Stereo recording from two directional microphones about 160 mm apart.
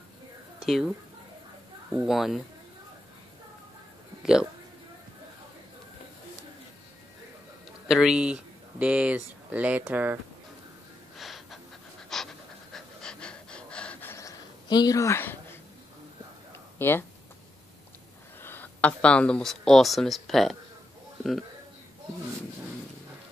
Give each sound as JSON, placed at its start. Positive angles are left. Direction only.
{"t": 0.6, "sound": "speech", "side_deg": 0}
{"t": 4.2, "sound": "speech", "side_deg": -5}
{"t": 7.9, "sound": "speech", "side_deg": -5}
{"t": 11.1, "sound": "gasp", "side_deg": 0}
{"t": 12.1, "sound": "pant", "side_deg": 0}
{"t": 14.1, "sound": "a sound", "side_deg": 25}
{"t": 16.7, "sound": "speech", "side_deg": 15}
{"t": 18.4, "sound": "a man's voice", "side_deg": 10}